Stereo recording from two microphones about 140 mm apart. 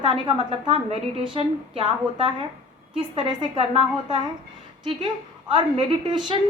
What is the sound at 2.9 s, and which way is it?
A woman's voice, 35° right (ahead or behind).